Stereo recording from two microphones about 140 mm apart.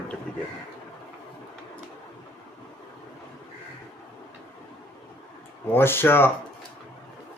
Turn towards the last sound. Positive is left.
turn(degrees=15)  # may be behind; listen again after turning